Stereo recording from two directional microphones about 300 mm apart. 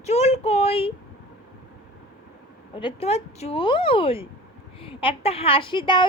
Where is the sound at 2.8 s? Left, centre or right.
Centre.